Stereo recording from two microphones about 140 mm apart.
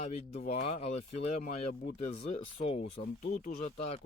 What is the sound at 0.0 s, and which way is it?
Speech, 45° left (ahead or behind).